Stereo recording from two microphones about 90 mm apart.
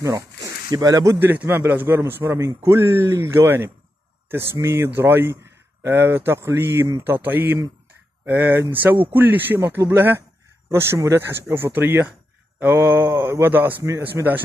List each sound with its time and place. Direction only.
0.0 s speech: 35° right (ahead or behind)
1.2 s a man's voice: 20° right (ahead or behind)